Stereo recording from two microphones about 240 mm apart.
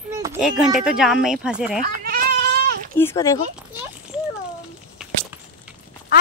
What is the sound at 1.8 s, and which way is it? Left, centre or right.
Goat, right.